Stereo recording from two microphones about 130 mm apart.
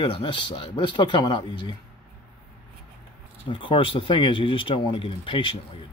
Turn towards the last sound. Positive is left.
turn(degrees=40)  # may be behind; listen again after turning